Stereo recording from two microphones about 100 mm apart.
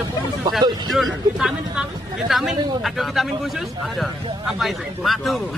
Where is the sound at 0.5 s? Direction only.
Centre (ahead or behind).